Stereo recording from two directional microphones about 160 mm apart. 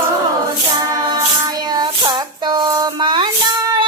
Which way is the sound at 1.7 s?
25° right (ahead or behind).